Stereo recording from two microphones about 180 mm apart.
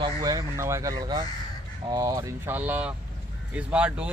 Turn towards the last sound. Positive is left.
turn(degrees=-5)  # may be behind; listen again after turning